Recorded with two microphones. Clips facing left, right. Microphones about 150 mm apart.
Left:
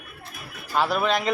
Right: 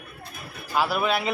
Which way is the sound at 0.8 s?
5° right (ahead or behind).